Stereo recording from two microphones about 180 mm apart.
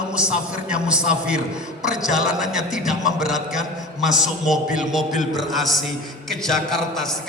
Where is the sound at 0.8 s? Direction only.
5° right (ahead or behind).